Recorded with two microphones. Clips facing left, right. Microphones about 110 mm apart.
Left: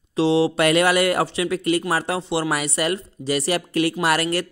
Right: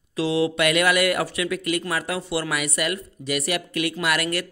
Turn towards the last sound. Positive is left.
turn(degrees=30)  # may be behind; listen again after turning